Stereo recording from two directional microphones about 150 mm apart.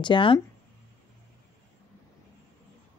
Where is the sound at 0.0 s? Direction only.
35° left (ahead or behind).